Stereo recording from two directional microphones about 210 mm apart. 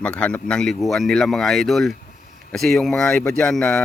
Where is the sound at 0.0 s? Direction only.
5° left (ahead or behind).